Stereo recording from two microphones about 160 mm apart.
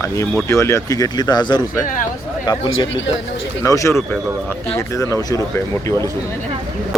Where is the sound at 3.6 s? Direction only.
20° left (ahead or behind).